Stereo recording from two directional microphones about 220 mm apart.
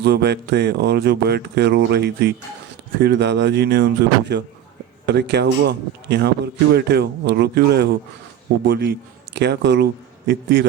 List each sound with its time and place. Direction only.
0.0 s speech: 50° right (ahead or behind)